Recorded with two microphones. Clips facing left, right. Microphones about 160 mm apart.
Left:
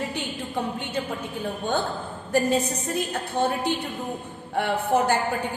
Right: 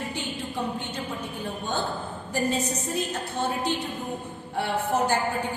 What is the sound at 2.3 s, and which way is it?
A woman's voice, 55° left (ahead or behind).